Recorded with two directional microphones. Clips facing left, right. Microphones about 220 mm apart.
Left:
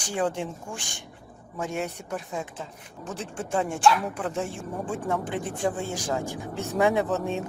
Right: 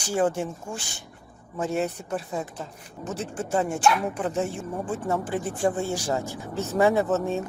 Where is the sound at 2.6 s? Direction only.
5° right (ahead or behind).